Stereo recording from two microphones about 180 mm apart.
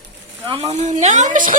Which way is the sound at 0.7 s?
40° right (ahead or behind).